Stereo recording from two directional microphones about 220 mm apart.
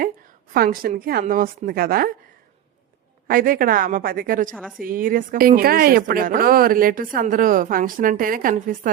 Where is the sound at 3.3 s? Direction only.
40° right (ahead or behind).